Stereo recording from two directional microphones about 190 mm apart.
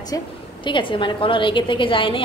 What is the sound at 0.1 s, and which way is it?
A woman's voice, 20° left (ahead or behind).